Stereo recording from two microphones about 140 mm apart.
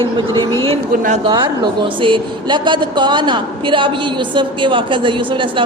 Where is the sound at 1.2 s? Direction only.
35° right (ahead or behind).